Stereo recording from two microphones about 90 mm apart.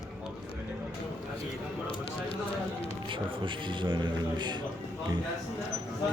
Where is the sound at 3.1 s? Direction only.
65° right (ahead or behind).